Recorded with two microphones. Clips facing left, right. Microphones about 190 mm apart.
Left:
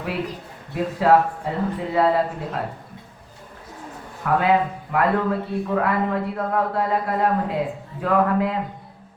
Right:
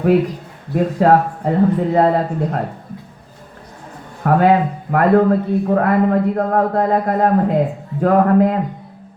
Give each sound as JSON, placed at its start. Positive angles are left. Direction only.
{"t": 0.7, "sound": "a man's voice", "side_deg": -45}
{"t": 4.2, "sound": "a man's voice", "side_deg": -45}